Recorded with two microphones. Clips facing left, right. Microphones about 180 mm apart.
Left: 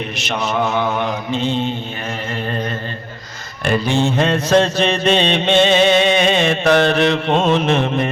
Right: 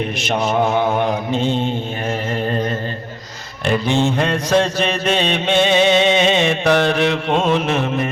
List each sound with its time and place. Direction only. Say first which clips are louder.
0.2 s mantra: right 2 dB; 50° right (ahead or behind)
3.6 s speech: even; 20° right (ahead or behind)
4.0 s mantra: left 1 dB; 10° right (ahead or behind)